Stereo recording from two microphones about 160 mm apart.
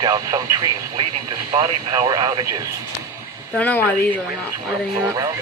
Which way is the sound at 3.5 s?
10° left (ahead or behind).